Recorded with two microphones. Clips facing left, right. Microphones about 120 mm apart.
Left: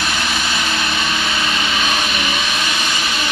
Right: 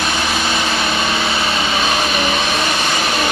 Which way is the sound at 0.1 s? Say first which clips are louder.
Right 3 dB; 25° right (ahead or behind).